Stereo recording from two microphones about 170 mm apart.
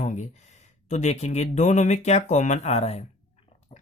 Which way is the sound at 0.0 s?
45° left (ahead or behind).